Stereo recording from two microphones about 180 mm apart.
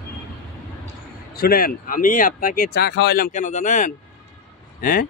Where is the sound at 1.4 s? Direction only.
55° left (ahead or behind).